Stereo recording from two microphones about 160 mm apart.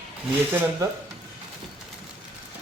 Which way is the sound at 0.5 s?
15° right (ahead or behind).